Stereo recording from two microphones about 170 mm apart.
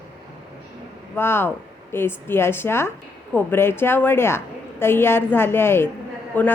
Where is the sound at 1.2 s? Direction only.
15° left (ahead or behind).